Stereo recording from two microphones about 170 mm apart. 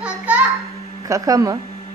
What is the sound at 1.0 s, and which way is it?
Speech, 20° right (ahead or behind).